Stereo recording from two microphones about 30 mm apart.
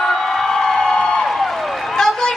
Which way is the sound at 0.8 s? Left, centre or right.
Left.